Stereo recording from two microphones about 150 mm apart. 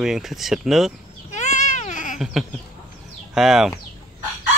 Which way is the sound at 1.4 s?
55° left (ahead or behind).